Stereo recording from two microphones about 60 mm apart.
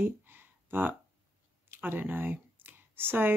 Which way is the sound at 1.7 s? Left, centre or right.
Right.